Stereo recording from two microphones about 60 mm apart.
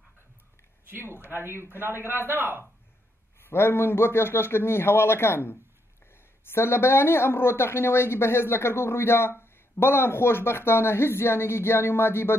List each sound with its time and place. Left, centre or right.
0.8 s speech: right
3.3 s speech: left